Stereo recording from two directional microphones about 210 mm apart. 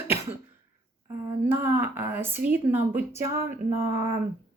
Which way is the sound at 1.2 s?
10° right (ahead or behind).